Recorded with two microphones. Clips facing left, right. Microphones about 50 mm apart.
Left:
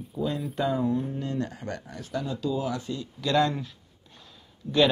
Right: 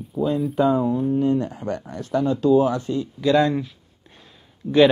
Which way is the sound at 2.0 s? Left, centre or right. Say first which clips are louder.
Right 11 dB; right.